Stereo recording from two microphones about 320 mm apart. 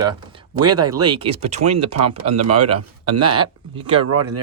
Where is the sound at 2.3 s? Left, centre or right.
Right.